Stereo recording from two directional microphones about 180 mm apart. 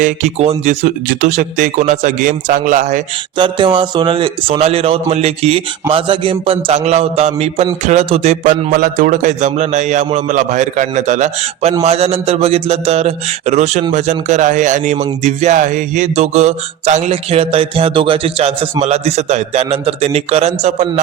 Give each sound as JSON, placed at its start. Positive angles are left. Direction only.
{"t": 0.0, "sound": "speech", "side_deg": -40}
{"t": 3.3, "sound": "music", "side_deg": -25}
{"t": 8.7, "sound": "music", "side_deg": -50}
{"t": 13.9, "sound": "speech", "side_deg": -40}
{"t": 15.2, "sound": "music", "side_deg": -40}